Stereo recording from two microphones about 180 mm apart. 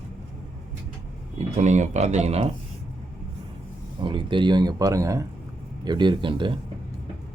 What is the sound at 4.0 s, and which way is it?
A man's voice, 25° right (ahead or behind).